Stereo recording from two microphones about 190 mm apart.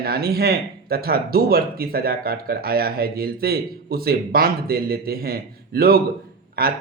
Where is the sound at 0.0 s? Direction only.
55° right (ahead or behind).